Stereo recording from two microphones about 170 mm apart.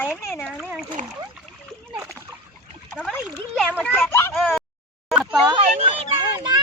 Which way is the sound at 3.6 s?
10° left (ahead or behind).